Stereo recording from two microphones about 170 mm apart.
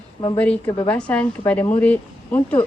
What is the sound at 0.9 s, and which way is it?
Speech, 5° left (ahead or behind).